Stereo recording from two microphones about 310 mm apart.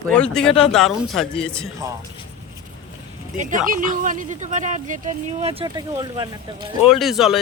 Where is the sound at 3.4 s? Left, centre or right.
Right.